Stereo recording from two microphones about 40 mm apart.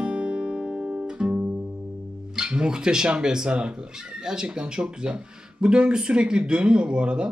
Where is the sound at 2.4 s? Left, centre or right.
Right.